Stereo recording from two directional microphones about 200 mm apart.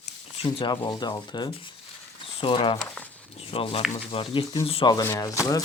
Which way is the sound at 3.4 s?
30° left (ahead or behind).